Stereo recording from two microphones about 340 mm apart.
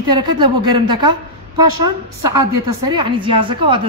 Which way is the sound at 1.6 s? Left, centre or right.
Right.